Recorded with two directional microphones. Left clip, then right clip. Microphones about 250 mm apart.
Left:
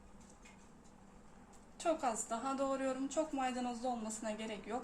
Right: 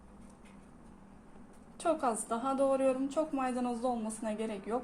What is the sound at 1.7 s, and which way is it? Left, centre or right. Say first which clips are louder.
Speech: right 4 dB; centre.